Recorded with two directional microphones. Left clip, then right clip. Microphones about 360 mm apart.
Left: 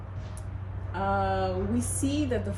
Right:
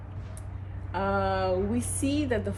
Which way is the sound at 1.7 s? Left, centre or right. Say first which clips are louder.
Even; centre.